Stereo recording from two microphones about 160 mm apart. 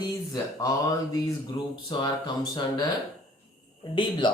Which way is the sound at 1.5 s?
35° left (ahead or behind).